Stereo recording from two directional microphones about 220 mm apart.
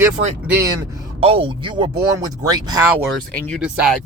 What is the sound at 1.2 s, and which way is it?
Speech, 25° right (ahead or behind).